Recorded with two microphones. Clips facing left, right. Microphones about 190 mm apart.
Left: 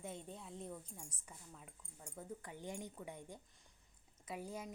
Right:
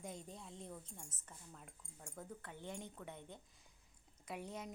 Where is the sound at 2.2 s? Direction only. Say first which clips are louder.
Left 2 dB; 10° left (ahead or behind).